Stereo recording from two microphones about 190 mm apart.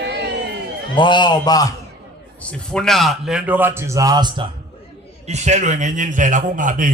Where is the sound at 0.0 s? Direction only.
65° right (ahead or behind).